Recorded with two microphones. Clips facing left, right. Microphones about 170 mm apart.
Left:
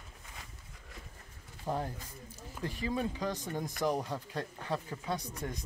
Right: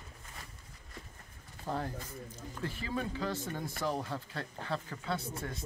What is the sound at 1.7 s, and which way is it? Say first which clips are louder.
Speech: left 1 dB; 15° left (ahead or behind).